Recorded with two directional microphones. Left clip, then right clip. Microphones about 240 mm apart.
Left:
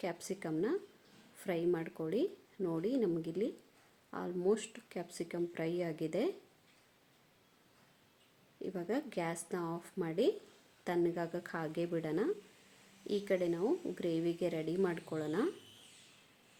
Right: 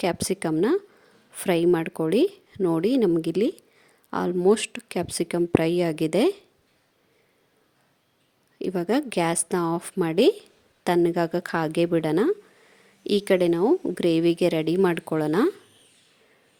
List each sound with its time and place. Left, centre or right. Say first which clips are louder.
0.0 s a woman's voice: right 15 dB; right
8.5 s a woman's voice: right 14 dB; right